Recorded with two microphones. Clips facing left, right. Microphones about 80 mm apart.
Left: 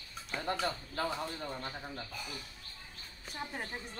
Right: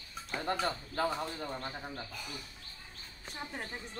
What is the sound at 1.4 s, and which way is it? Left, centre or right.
Speech, centre.